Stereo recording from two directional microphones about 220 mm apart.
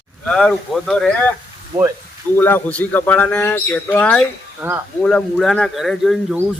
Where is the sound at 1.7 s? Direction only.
35° right (ahead or behind).